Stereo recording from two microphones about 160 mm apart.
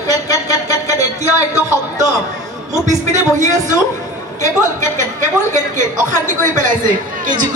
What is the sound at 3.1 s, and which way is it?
A woman's voice, 50° right (ahead or behind).